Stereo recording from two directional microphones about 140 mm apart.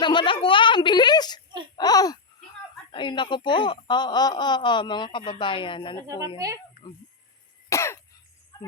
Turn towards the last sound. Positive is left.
turn(degrees=20)  # may be behind; listen again after turning